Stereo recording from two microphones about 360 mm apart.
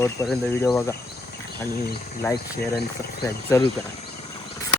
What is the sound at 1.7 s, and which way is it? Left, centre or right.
Speech, left.